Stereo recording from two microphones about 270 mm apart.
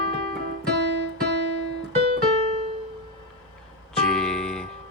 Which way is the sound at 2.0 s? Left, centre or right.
Right.